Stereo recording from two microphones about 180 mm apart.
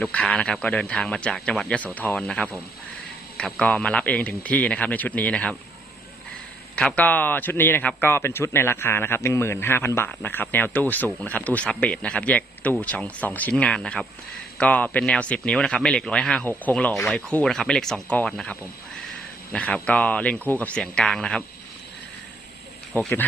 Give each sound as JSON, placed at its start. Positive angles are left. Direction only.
{"t": 0.0, "sound": "a man's voice", "side_deg": 5}
{"t": 6.7, "sound": "a man's voice", "side_deg": 5}
{"t": 19.5, "sound": "a man's voice", "side_deg": 5}
{"t": 22.9, "sound": "speech", "side_deg": 10}